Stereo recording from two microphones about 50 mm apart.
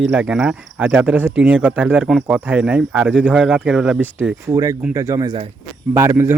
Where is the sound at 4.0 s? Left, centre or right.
Right.